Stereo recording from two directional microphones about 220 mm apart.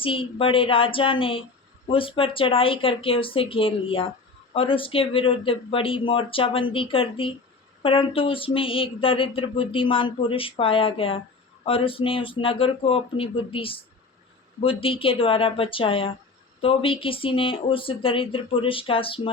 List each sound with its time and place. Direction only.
0.0 s speech: 25° left (ahead or behind)